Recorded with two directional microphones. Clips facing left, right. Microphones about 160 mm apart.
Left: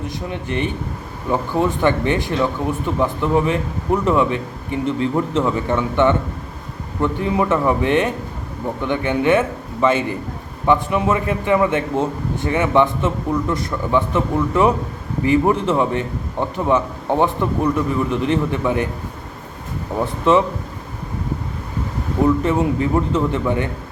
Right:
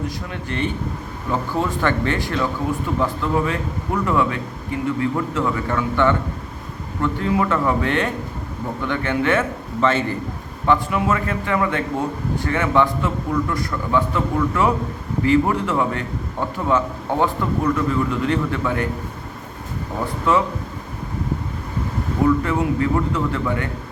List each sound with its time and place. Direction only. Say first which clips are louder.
0.3 s a man's voice: left 4 dB; 20° left (ahead or behind)
20.3 s a man's voice: left 4 dB; 20° left (ahead or behind)
22.4 s a man's voice: left 2 dB; 20° left (ahead or behind)